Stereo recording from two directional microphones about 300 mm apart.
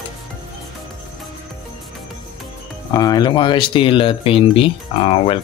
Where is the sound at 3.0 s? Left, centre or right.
Centre.